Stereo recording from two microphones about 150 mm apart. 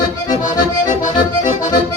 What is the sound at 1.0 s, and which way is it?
Accordion, 55° left (ahead or behind).